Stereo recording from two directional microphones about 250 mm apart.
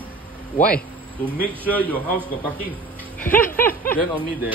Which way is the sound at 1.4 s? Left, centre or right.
Centre.